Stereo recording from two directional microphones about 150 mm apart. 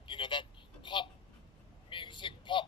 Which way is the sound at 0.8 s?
35° left (ahead or behind).